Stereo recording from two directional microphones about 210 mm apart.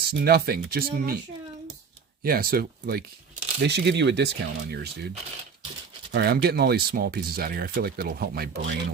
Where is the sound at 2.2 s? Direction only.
45° right (ahead or behind).